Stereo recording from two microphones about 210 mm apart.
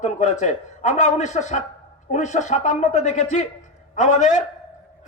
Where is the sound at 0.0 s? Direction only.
35° left (ahead or behind).